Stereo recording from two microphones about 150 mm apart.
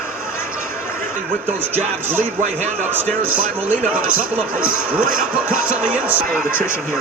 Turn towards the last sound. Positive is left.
turn(degrees=-10)  # may be behind; listen again after turning